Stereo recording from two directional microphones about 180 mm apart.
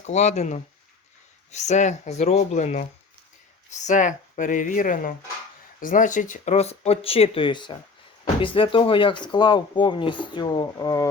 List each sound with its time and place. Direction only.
0.0 s speech: 40° left (ahead or behind)
3.8 s speech: 45° left (ahead or behind); by 11.1 s 20° left (ahead or behind)